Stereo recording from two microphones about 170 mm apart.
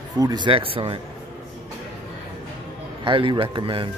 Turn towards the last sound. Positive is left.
turn(degrees=-30)  # may be behind; listen again after turning